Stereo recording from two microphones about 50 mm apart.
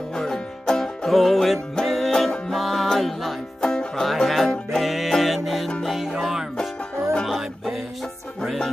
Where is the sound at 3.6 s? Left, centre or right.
Centre.